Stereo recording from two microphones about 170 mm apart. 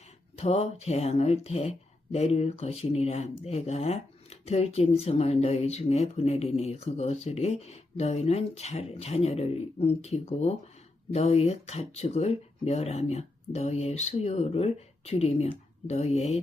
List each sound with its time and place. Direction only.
0.3 s speech: 40° left (ahead or behind)